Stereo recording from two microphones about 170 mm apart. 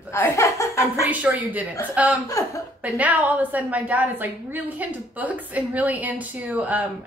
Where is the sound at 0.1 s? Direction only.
15° left (ahead or behind).